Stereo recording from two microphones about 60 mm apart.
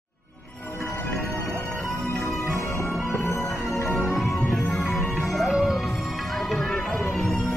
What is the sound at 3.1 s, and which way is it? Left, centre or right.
Music, left.